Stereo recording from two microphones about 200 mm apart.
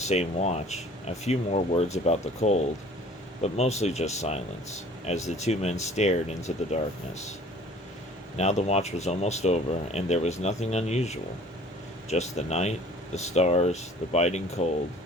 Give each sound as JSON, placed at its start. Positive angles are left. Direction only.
{"t": 0.0, "sound": "speech", "side_deg": 35}
{"t": 8.4, "sound": "speech", "side_deg": 35}